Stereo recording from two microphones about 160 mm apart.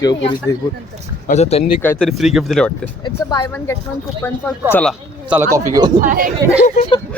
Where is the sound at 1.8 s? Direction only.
10° left (ahead or behind).